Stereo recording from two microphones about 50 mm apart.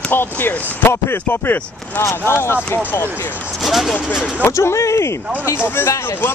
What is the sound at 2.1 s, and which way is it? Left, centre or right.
Speech, left.